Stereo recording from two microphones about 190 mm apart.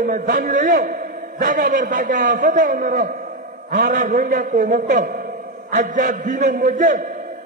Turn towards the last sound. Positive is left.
turn(degrees=-45)  # may be behind; listen again after turning